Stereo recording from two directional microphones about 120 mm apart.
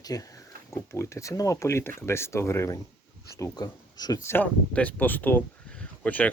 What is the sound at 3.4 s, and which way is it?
Speech, 35° left (ahead or behind).